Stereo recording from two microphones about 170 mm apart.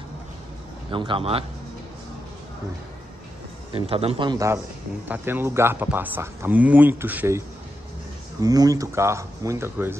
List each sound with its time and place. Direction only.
0.9 s a man's voice: 30° right (ahead or behind)
3.7 s a man's voice: 35° right (ahead or behind)
5.0 s speech: 10° right (ahead or behind)